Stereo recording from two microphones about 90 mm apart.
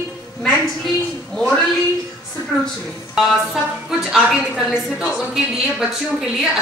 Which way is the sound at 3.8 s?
5° right (ahead or behind).